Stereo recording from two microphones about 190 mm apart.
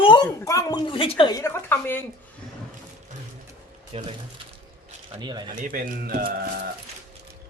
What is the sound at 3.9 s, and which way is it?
Speech, 30° right (ahead or behind).